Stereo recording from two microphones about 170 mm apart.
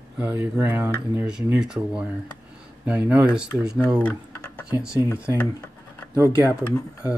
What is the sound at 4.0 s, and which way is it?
Typing, 10° left (ahead or behind).